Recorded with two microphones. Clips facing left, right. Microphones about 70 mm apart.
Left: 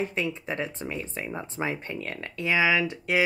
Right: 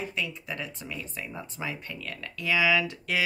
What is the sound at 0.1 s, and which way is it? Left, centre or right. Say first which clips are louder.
Speech: left 4 dB; left.